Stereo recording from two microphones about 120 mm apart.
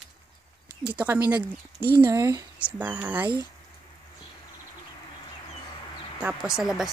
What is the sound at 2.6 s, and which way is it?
Speech, 15° right (ahead or behind).